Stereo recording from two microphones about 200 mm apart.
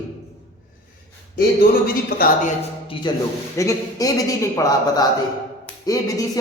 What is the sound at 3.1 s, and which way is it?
A man's voice, 20° left (ahead or behind).